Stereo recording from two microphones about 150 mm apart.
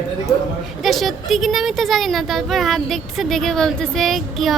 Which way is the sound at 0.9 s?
Centre (ahead or behind).